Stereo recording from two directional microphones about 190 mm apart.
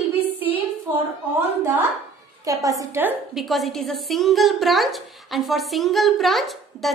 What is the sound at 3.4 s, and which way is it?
A woman's voice, centre (ahead or behind).